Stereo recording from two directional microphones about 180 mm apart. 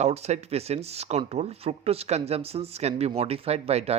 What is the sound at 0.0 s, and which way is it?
Speech, 40° right (ahead or behind).